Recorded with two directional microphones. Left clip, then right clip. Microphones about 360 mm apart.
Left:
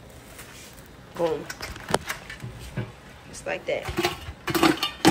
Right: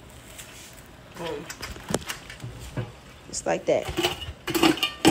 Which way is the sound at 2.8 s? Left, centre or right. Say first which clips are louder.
Right 1 dB; centre.